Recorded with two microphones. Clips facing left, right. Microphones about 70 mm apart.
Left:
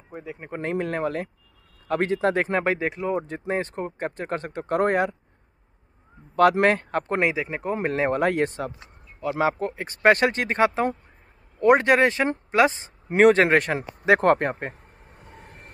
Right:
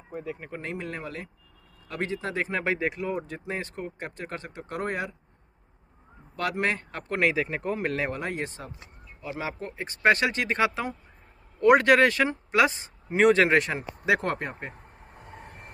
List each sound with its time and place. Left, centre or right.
0.1 s speech: centre
0.5 s speech: left
2.6 s speech: left
6.6 s speech: left
7.2 s speech: centre
7.7 s speech: left
8.1 s speech: left
9.4 s speech: left
11.6 s speech: left
13.1 s speech: left
14.7 s a sound: centre